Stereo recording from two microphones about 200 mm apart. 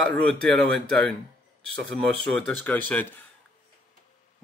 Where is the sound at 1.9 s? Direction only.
5° left (ahead or behind).